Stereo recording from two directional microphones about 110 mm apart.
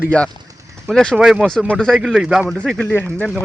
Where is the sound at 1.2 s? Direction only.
5° right (ahead or behind).